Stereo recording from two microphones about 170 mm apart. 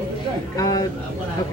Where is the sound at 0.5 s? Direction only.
20° left (ahead or behind).